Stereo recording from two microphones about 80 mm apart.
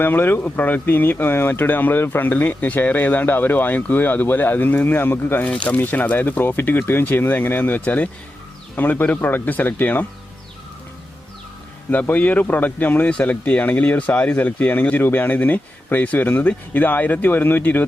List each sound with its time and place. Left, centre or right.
0.0 s speech: left
5.5 s speech: centre
11.9 s speech: left